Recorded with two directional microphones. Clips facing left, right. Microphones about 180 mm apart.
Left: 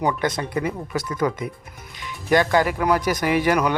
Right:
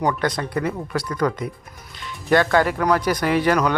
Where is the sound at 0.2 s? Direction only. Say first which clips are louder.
Right 1 dB; 20° left (ahead or behind).